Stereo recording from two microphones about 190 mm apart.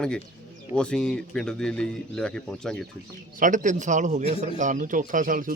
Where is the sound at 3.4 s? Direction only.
40° right (ahead or behind).